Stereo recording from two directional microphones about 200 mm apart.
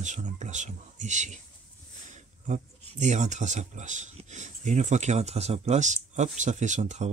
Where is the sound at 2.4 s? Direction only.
35° right (ahead or behind).